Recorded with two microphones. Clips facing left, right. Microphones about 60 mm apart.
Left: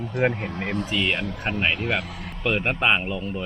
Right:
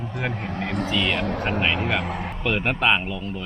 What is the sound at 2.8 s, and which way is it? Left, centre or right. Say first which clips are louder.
Speech: even; centre.